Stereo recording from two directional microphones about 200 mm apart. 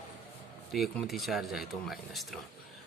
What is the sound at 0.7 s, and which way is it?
A man's voice, centre (ahead or behind).